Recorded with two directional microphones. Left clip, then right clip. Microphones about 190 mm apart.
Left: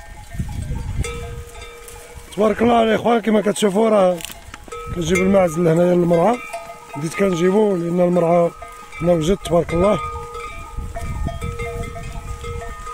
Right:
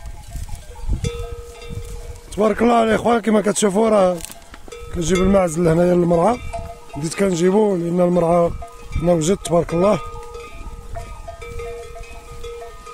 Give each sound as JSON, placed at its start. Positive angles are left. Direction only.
{"t": 2.3, "sound": "speech", "side_deg": 0}